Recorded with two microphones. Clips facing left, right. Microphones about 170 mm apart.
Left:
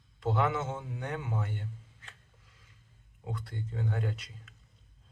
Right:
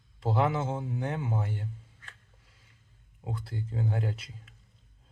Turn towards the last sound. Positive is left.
turn(degrees=-30)  # may be behind; listen again after turning